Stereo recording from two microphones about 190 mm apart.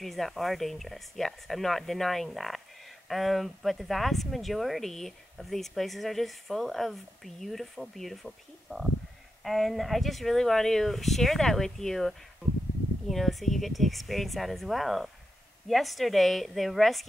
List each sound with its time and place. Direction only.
0.0 s speech: centre (ahead or behind)